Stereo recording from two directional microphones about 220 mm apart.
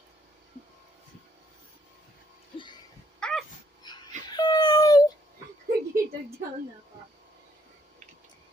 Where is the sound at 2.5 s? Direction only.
20° left (ahead or behind).